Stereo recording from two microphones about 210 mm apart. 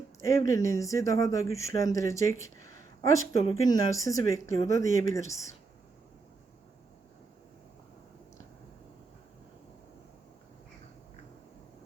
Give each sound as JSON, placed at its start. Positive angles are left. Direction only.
{"t": 0.3, "sound": "speech", "side_deg": 15}
{"t": 4.4, "sound": "speech", "side_deg": -40}
{"t": 5.0, "sound": "speech", "side_deg": 15}